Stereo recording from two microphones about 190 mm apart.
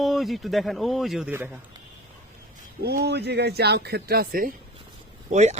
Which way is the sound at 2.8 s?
60° right (ahead or behind).